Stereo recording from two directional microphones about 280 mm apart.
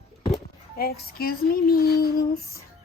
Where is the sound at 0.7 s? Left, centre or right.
Left.